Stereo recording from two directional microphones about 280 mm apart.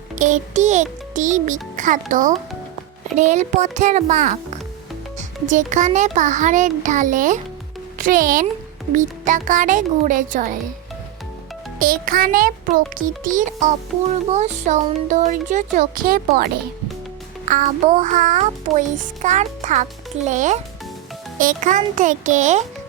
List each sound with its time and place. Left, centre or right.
0.2 s music: right
5.5 s music: right
11.8 s music: right
17.4 s music: right